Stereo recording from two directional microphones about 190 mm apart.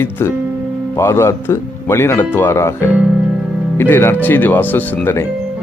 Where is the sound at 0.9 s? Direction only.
15° left (ahead or behind).